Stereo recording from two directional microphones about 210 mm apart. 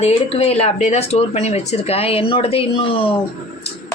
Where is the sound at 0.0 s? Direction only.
30° left (ahead or behind).